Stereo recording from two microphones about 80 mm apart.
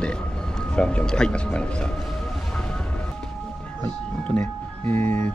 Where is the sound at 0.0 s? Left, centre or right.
Centre.